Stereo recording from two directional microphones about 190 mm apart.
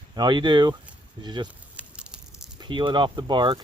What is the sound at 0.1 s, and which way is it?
Speech, 25° right (ahead or behind).